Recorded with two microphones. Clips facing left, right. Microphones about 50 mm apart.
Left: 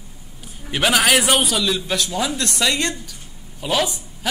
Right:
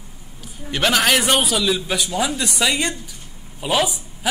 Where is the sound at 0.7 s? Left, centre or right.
Centre.